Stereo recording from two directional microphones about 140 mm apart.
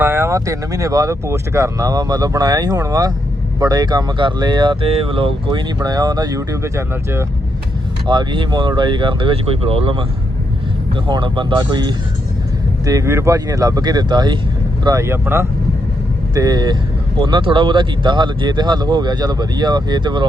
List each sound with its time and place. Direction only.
0.0 s speech: 15° right (ahead or behind)
8.0 s speech: 35° right (ahead or behind)
11.1 s speech: 35° right (ahead or behind)
14.8 s speech: 20° right (ahead or behind)
16.3 s speech: 25° right (ahead or behind)